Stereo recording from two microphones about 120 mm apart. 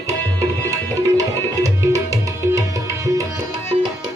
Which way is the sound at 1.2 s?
30° right (ahead or behind).